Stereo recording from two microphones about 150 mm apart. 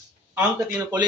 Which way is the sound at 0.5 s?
25° right (ahead or behind).